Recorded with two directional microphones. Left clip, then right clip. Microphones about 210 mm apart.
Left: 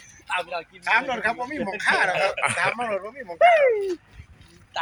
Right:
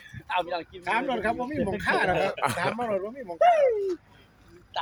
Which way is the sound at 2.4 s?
10° right (ahead or behind).